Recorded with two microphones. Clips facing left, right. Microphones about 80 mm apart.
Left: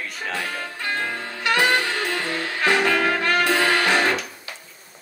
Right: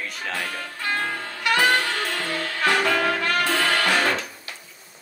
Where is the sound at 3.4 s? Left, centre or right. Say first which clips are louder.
Left 2 dB; centre.